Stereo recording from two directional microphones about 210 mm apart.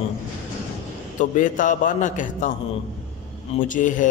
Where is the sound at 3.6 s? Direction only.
40° left (ahead or behind).